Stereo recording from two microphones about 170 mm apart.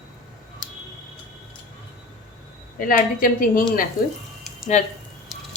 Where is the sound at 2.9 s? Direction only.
55° left (ahead or behind).